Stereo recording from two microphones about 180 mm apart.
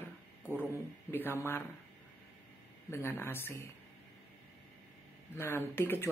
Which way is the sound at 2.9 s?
15° left (ahead or behind).